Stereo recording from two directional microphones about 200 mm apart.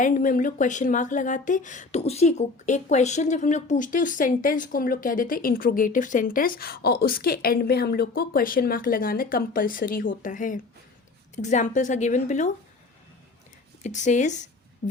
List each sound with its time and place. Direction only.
0.0 s a woman's voice: 40° left (ahead or behind)
13.8 s a woman's voice: 35° left (ahead or behind)